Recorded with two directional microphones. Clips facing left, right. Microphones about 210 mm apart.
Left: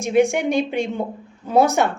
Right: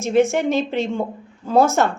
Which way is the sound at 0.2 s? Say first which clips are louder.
Even; 15° left (ahead or behind).